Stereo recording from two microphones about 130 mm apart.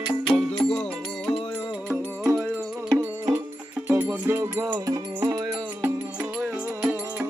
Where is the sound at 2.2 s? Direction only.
20° right (ahead or behind).